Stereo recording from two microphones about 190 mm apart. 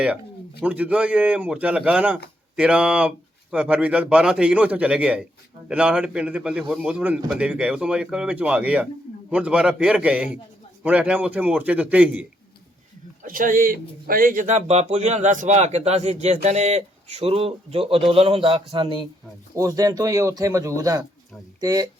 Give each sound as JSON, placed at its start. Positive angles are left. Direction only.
{"t": 0.6, "sound": "a man's voice", "side_deg": -5}
{"t": 13.2, "sound": "a man's voice", "side_deg": -45}